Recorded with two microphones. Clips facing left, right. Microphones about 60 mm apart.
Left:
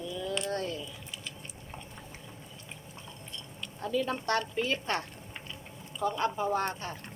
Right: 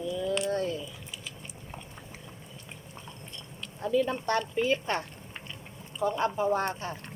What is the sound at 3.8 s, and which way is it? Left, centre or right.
A woman's voice, centre.